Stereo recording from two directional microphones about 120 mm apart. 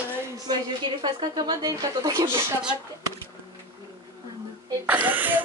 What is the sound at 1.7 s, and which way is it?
Speech, 30° right (ahead or behind).